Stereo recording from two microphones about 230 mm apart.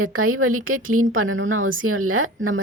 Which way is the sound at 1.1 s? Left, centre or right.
Right.